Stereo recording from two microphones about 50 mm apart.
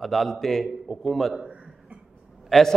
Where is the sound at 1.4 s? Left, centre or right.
Right.